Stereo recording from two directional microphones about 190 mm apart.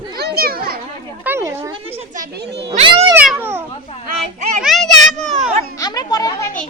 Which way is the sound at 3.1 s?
10° right (ahead or behind).